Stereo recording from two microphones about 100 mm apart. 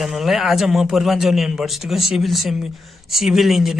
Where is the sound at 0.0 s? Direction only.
5° right (ahead or behind).